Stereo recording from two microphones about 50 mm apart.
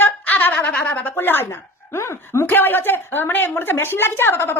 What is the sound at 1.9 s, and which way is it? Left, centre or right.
Speech, left.